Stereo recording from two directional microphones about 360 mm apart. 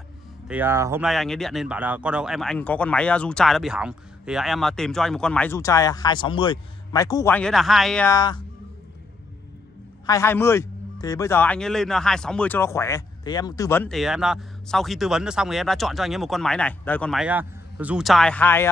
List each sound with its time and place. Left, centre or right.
0.5 s speech: centre
10.0 s speech: centre